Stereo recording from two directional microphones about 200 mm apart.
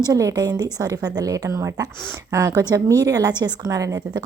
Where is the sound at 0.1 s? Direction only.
15° right (ahead or behind).